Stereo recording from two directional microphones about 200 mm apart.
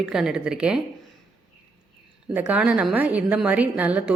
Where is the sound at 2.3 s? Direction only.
5° right (ahead or behind).